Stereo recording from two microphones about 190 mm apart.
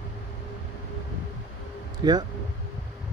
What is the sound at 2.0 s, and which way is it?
Speech, 20° right (ahead or behind).